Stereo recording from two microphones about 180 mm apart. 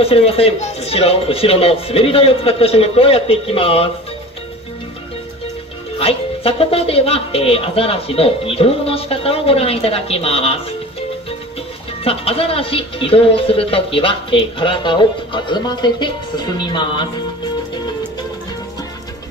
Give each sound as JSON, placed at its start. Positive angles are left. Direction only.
{"t": 0.0, "sound": "speech", "side_deg": 35}
{"t": 5.9, "sound": "speech", "side_deg": 30}
{"t": 12.0, "sound": "speech", "side_deg": 30}